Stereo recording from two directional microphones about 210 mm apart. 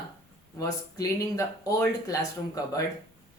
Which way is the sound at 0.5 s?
15° left (ahead or behind).